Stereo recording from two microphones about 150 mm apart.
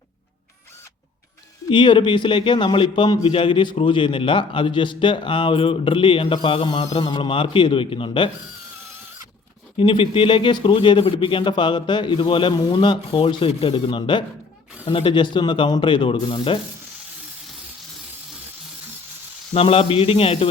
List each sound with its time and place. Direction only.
1.7 s a man's voice: 30° left (ahead or behind)
9.7 s a man's voice: 35° left (ahead or behind)
19.5 s a man's voice: 40° left (ahead or behind)